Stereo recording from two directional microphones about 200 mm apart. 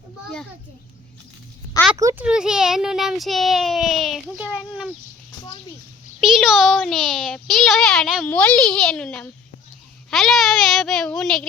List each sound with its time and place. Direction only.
2.0 s a child's voice: 15° right (ahead or behind)
2.2 s a child's voice: 5° right (ahead or behind)
6.1 s a child's voice: centre (ahead or behind)